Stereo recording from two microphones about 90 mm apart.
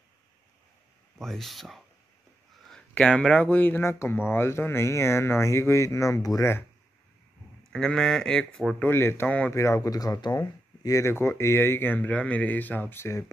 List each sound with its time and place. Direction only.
1.1 s speech: 5° left (ahead or behind)
2.9 s speech: 10° left (ahead or behind); by 6.5 s 35° left (ahead or behind)
7.7 s speech: 5° left (ahead or behind)
8.7 s speech: 25° left (ahead or behind)
9.5 s speech: 35° left (ahead or behind)